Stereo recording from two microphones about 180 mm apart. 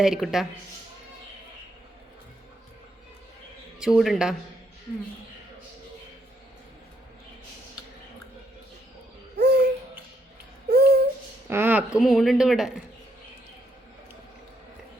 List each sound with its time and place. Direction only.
0.0 s speech: 5° right (ahead or behind)
3.8 s speech: centre (ahead or behind)
9.4 s babbling: 65° right (ahead or behind)
10.7 s a sound: 60° right (ahead or behind)
11.4 s speech: 10° right (ahead or behind)